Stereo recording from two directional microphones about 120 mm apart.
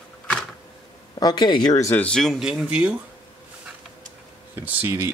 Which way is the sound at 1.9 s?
10° left (ahead or behind).